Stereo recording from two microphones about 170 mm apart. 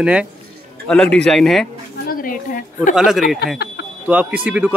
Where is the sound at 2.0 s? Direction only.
55° left (ahead or behind).